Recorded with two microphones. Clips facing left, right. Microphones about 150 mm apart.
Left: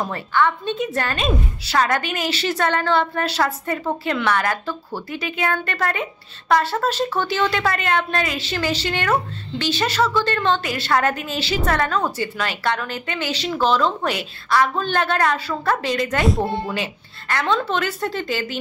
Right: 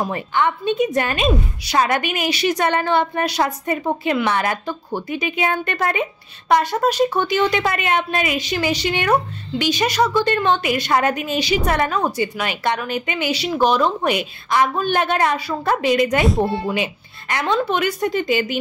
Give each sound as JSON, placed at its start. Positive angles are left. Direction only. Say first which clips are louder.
{"t": 0.0, "sound": "a woman's voice", "louder": "even", "side_deg": -15}